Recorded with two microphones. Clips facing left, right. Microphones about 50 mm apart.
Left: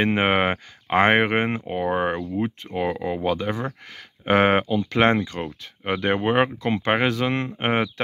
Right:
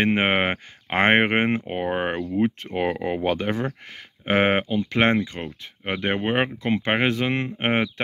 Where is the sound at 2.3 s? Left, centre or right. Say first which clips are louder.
Right 3 dB; right.